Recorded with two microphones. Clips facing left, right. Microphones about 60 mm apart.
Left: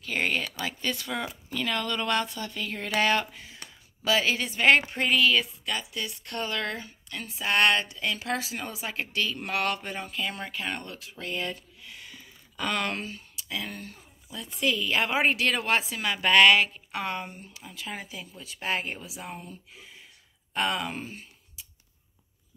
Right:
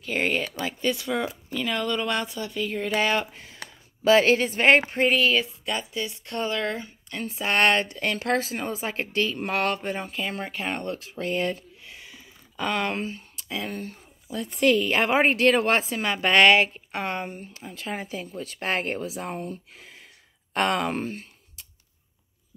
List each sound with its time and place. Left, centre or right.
0.0 s speech: centre
1.3 s speech: centre
1.8 s speech: centre
3.6 s a sound: right
4.0 s speech: right; by 6.9 s centre
7.1 s speech: right
13.5 s speech: right
14.3 s speech: right